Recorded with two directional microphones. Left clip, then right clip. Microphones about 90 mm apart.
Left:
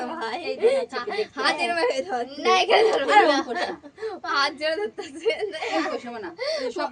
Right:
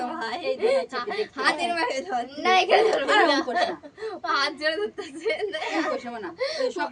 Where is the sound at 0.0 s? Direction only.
20° right (ahead or behind).